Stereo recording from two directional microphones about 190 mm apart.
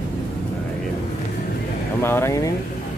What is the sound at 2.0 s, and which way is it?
Speech, 15° left (ahead or behind).